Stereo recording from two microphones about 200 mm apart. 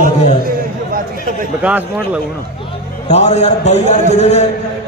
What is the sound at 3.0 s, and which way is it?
A man's voice, 35° left (ahead or behind).